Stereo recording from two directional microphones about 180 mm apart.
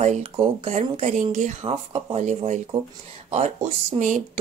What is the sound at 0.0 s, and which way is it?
Speech, 40° right (ahead or behind).